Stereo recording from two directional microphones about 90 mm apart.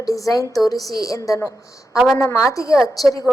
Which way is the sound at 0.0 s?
40° left (ahead or behind).